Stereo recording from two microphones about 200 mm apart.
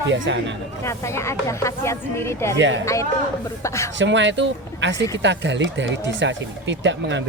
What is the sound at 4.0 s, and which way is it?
Speech, 65° right (ahead or behind).